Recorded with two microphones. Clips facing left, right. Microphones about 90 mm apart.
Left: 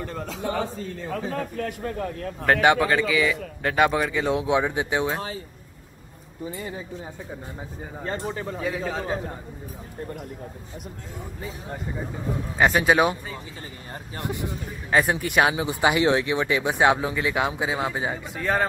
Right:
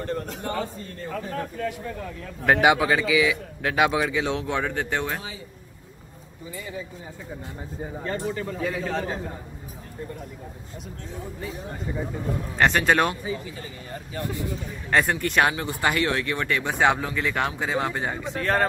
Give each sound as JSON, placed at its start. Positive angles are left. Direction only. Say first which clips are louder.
{"t": 1.2, "sound": "speech", "louder": "even", "side_deg": 80}
{"t": 2.4, "sound": "speech", "louder": "even", "side_deg": -5}
{"t": 8.0, "sound": "speech", "louder": "even", "side_deg": 25}
{"t": 8.5, "sound": "speech", "louder": "even", "side_deg": 0}
{"t": 12.5, "sound": "speech", "louder": "left 1 dB", "side_deg": 10}
{"t": 14.1, "sound": "speech", "louder": "even", "side_deg": 20}
{"t": 14.9, "sound": "speech", "louder": "left 1 dB", "side_deg": 5}